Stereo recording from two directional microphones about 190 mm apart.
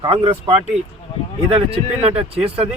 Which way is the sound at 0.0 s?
30° right (ahead or behind).